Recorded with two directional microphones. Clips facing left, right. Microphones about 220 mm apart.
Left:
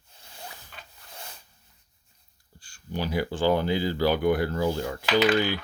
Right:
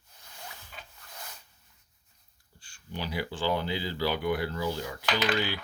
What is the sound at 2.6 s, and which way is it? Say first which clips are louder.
Speech: left 6 dB; 40° left (ahead or behind).